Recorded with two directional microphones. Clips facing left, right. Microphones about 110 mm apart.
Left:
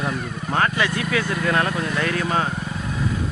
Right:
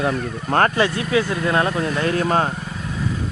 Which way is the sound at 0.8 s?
30° right (ahead or behind).